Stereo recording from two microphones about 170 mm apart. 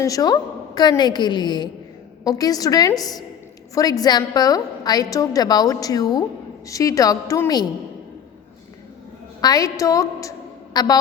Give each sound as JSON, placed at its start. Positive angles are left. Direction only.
{"t": 0.0, "sound": "a woman's voice", "side_deg": 20}
{"t": 9.4, "sound": "a woman's voice", "side_deg": 20}